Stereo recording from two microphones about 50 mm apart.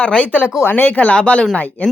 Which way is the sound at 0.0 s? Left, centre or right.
Left.